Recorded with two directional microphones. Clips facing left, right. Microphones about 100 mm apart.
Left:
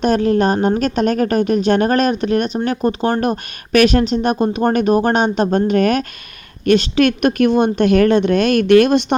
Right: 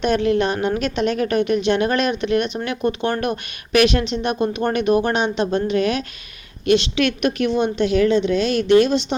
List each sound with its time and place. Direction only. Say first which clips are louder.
0.0 s a woman's voice: left 3 dB; 40° left (ahead or behind); by 9.1 s 55° left (ahead or behind)